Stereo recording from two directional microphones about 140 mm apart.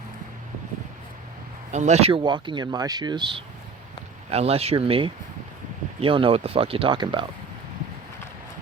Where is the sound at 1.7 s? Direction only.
55° right (ahead or behind); by 3.4 s 35° right (ahead or behind).